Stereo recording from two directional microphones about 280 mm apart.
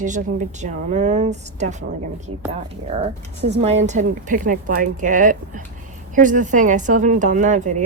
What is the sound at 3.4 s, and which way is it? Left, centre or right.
Speech, right.